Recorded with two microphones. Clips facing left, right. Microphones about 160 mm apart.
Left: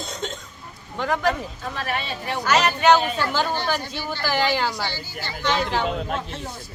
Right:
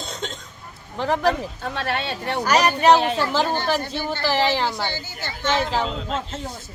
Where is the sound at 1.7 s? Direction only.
70° right (ahead or behind).